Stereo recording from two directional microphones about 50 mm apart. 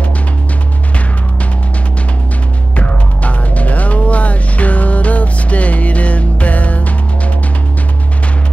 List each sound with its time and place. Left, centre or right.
2.7 s music: left